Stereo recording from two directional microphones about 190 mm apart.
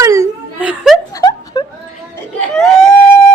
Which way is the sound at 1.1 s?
20° left (ahead or behind).